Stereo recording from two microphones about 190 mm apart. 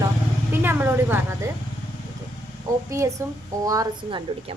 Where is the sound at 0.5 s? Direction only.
10° right (ahead or behind).